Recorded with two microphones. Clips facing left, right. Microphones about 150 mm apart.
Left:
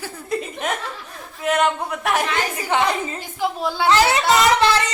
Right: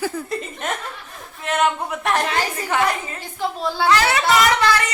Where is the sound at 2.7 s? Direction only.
20° left (ahead or behind).